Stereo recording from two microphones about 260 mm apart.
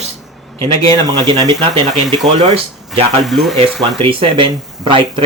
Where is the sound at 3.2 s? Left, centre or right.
Centre.